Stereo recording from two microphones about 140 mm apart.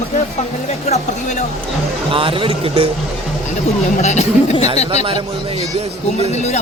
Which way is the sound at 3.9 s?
55° left (ahead or behind).